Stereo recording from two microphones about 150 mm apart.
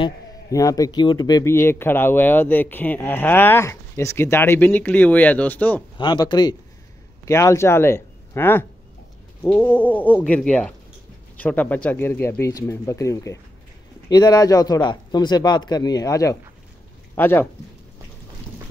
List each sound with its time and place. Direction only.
0.5 s speech: 25° left (ahead or behind)
5.9 s a man's voice: 30° left (ahead or behind); by 17.5 s 15° left (ahead or behind)